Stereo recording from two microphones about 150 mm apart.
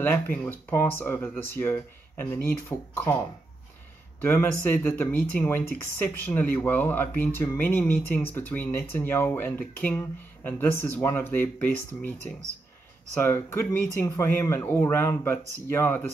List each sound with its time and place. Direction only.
0.0 s speech: 10° left (ahead or behind)
4.2 s speech: 15° left (ahead or behind)